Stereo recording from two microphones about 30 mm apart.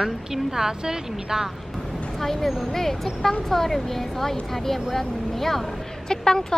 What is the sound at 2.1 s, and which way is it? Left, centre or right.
Speech, centre.